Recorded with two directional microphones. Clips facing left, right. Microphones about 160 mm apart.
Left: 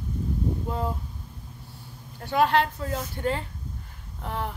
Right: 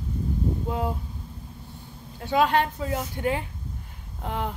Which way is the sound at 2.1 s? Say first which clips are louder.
Even; 15° right (ahead or behind).